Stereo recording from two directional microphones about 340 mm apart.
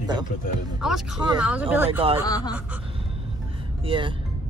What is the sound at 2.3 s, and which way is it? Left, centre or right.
Speech, centre.